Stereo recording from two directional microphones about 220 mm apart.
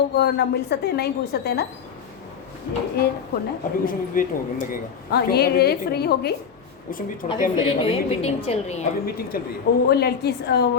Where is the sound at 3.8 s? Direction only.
40° left (ahead or behind).